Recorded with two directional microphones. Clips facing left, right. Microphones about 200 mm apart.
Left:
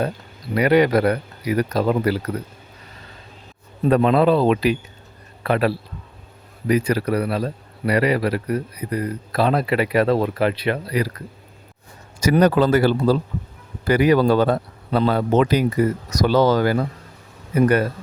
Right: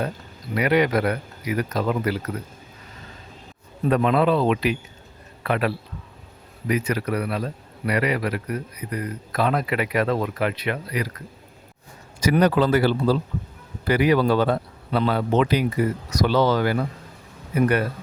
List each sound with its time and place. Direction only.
0.5 s a man's voice: 35° left (ahead or behind)
3.8 s a man's voice: 35° left (ahead or behind)
12.2 s a man's voice: 45° left (ahead or behind)